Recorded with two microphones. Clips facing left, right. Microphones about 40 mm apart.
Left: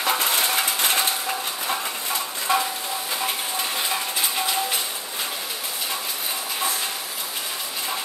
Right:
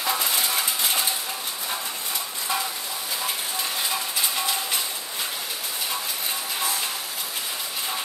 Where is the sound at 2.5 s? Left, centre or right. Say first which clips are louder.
Left 6 dB; left.